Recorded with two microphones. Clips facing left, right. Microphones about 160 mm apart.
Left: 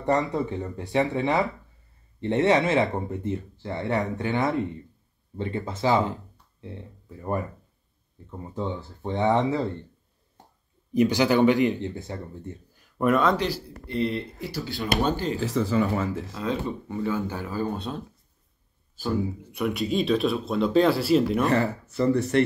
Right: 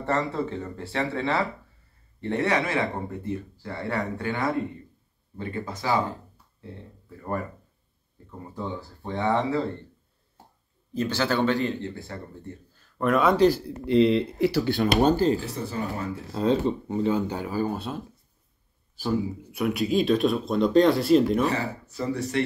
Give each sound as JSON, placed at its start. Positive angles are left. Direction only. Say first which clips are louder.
{"t": 0.0, "sound": "speech", "louder": "left 2 dB", "side_deg": 15}
{"t": 7.2, "sound": "speech", "louder": "left 2 dB", "side_deg": 20}
{"t": 10.9, "sound": "speech", "louder": "left 5 dB", "side_deg": 15}
{"t": 13.4, "sound": "speech", "louder": "right 9 dB", "side_deg": -40}
{"t": 13.8, "sound": "speech", "louder": "right 8 dB", "side_deg": -90}
{"t": 14.8, "sound": "speech", "louder": "right 4 dB", "side_deg": -40}
{"t": 15.4, "sound": "speech", "louder": "left 7 dB", "side_deg": 90}
{"t": 16.3, "sound": "speech", "louder": "right 5 dB", "side_deg": -30}
{"t": 19.5, "sound": "speech", "louder": "right 2 dB", "side_deg": 0}
{"t": 21.5, "sound": "speech", "louder": "left 4 dB", "side_deg": 65}